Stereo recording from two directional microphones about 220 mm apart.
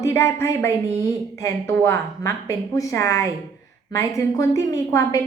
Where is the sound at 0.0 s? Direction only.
15° left (ahead or behind).